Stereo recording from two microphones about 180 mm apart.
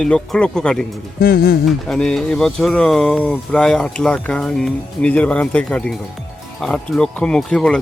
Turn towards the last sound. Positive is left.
turn(degrees=5)  # may be behind; listen again after turning